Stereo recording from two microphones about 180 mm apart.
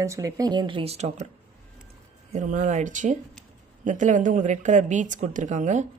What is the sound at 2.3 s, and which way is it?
Speech, 45° right (ahead or behind).